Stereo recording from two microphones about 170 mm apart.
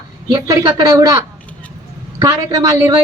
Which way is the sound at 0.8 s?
20° right (ahead or behind).